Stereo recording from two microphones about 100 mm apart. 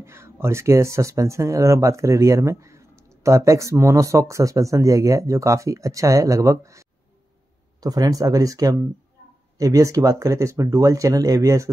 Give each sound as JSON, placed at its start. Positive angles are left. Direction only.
{"t": 0.0, "sound": "speech", "side_deg": -25}